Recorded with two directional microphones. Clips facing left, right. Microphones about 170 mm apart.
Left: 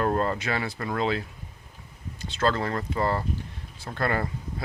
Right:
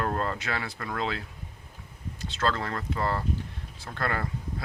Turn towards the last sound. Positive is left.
turn(degrees=10)  # may be behind; listen again after turning